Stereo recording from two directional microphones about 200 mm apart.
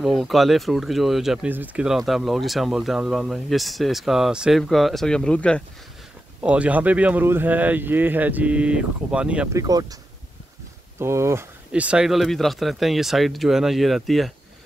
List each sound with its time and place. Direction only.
0.0 s speech: centre (ahead or behind)
6.4 s speech: 5° right (ahead or behind)
9.6 s speech: 20° right (ahead or behind)
11.0 s speech: 15° right (ahead or behind)